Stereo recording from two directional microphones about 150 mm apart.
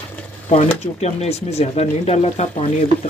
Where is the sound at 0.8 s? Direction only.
45° left (ahead or behind).